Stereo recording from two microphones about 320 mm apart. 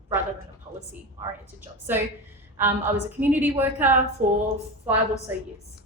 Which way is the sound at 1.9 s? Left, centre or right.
Centre.